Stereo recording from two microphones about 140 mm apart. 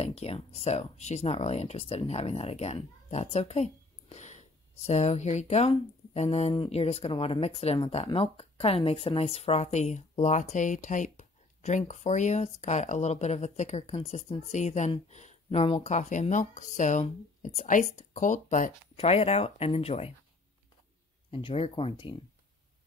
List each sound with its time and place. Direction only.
0.0 s speech: 45° left (ahead or behind); by 18.7 s 65° left (ahead or behind)
18.9 s speech: 45° left (ahead or behind)
21.3 s speech: 40° left (ahead or behind)